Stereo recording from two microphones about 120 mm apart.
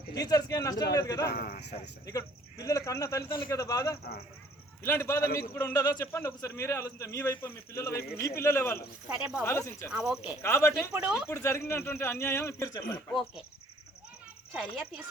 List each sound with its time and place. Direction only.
0.1 s a man's voice: 30° left (ahead or behind)
9.0 s speech: 10° right (ahead or behind)
9.4 s a man's voice: 20° left (ahead or behind)
9.9 s speech: 5° right (ahead or behind)
10.4 s a man's voice: 20° left (ahead or behind)
10.9 s speech: 10° right (ahead or behind)
11.3 s a man's voice: 20° left (ahead or behind)
13.1 s speech: centre (ahead or behind)
14.5 s speech: 10° right (ahead or behind)